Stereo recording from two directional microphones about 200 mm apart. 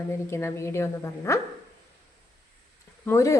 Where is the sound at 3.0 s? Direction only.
15° left (ahead or behind).